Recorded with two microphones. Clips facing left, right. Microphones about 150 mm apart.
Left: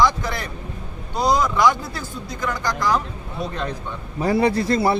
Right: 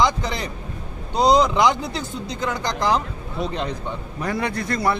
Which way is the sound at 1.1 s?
20° right (ahead or behind).